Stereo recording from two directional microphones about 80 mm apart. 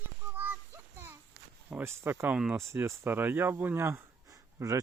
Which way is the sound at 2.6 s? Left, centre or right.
Right.